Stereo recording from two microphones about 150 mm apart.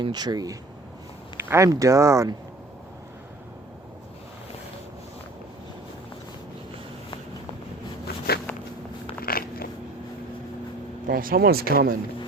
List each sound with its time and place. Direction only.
0.0 s speech: 30° right (ahead or behind)
9.2 s biting: 80° left
11.0 s speech: 70° right (ahead or behind); by 11.9 s 90° right